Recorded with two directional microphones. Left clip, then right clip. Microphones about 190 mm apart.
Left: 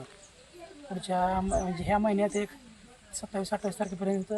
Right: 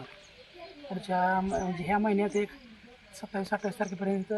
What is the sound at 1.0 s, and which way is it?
Speech, 25° left (ahead or behind).